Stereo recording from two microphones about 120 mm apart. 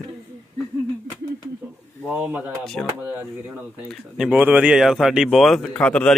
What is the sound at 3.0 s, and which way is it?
Speech, 15° right (ahead or behind).